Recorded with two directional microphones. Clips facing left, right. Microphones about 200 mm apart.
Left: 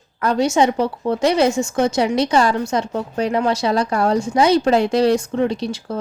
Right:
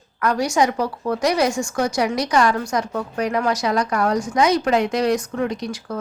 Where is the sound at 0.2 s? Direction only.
25° left (ahead or behind).